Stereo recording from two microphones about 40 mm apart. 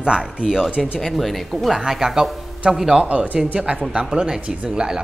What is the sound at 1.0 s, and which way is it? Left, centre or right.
Speech, centre.